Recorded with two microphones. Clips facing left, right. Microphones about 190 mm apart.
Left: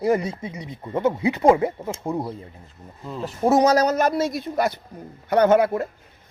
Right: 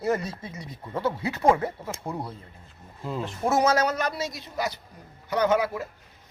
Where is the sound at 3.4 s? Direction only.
35° left (ahead or behind).